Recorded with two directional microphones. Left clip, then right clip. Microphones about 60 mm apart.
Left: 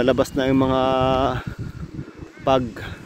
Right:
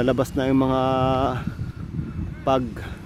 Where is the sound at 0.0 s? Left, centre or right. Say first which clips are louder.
Left 3 dB; centre.